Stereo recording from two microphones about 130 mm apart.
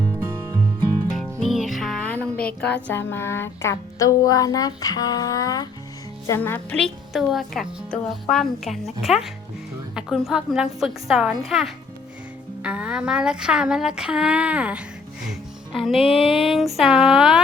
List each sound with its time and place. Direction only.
1.1 s a woman's voice: centre (ahead or behind); by 6.7 s 15° left (ahead or behind)
6.7 s a woman's voice: centre (ahead or behind)
15.3 s music: centre (ahead or behind)
16.0 s a sound: 45° left (ahead or behind)
16.5 s a woman's voice: centre (ahead or behind)